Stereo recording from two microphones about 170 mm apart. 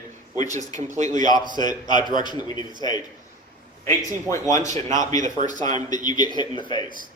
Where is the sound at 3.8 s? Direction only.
20° left (ahead or behind).